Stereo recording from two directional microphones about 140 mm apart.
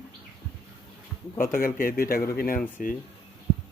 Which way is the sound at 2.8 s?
75° left (ahead or behind).